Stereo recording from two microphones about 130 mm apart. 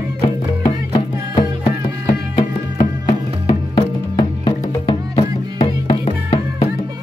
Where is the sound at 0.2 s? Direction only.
30° left (ahead or behind).